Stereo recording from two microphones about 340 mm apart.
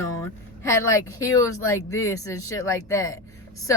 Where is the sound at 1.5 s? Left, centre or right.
Left.